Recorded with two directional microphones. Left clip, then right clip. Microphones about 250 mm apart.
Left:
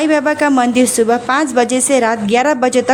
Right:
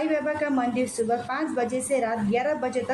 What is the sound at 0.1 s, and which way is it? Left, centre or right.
A woman's voice, left.